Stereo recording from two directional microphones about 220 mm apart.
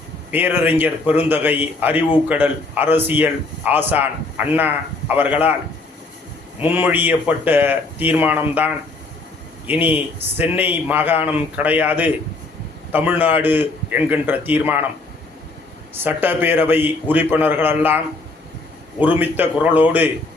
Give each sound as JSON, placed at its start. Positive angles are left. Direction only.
{"t": 0.3, "sound": "speech", "side_deg": -10}
{"t": 6.6, "sound": "speech", "side_deg": -10}
{"t": 16.0, "sound": "speech", "side_deg": -10}